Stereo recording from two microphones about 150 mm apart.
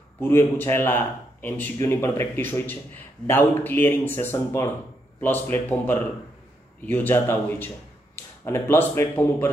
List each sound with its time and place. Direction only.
0.2 s speech: 15° left (ahead or behind)